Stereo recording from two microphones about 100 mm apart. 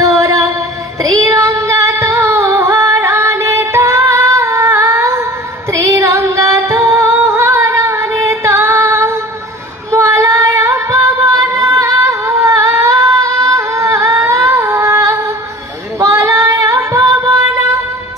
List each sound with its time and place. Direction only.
0.0 s music: 35° right (ahead or behind)
1.2 s child singing: 35° right (ahead or behind)
1.6 s music: 30° right (ahead or behind)
6.2 s singing: 30° right (ahead or behind)
9.8 s female singing: 30° right (ahead or behind)
14.2 s humming: 30° right (ahead or behind)
14.5 s music: 25° right (ahead or behind)
16.0 s female singing: 35° right (ahead or behind)
16.9 s music: 35° right (ahead or behind)